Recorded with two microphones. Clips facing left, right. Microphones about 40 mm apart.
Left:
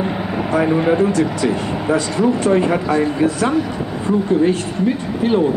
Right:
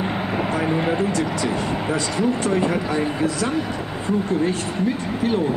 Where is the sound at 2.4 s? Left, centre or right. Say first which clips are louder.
Left 5 dB; left.